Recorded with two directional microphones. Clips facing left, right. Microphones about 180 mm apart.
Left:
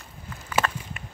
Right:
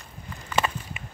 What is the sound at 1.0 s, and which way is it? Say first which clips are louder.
Run: even; centre (ahead or behind).